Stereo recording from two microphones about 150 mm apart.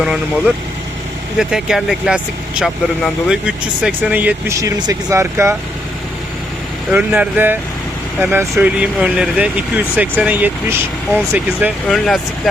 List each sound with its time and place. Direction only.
0.0 s speech: 5° right (ahead or behind)
4.6 s speech: 20° right (ahead or behind)
6.9 s speech: 10° right (ahead or behind)
11.9 s speech: centre (ahead or behind)